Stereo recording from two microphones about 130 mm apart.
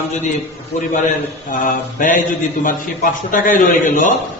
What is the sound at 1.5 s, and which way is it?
Speech, 90° left.